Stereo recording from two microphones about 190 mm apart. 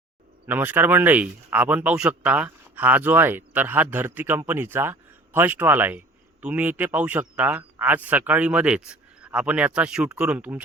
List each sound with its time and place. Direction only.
0.4 s speech: 10° right (ahead or behind)